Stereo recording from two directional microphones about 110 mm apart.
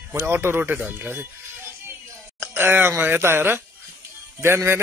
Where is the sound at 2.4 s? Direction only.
20° right (ahead or behind).